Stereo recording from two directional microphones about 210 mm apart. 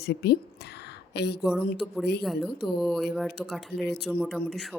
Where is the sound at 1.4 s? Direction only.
5° right (ahead or behind).